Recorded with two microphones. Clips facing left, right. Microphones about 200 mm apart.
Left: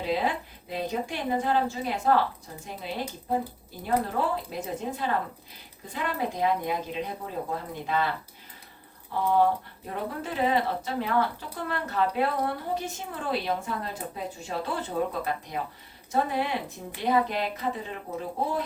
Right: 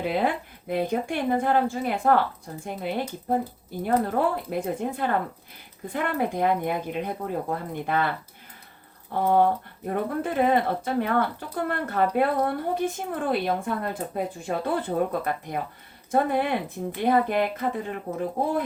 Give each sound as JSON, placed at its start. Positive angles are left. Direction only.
{"t": 0.0, "sound": "a woman's voice", "side_deg": -55}
{"t": 9.1, "sound": "a woman's voice", "side_deg": -50}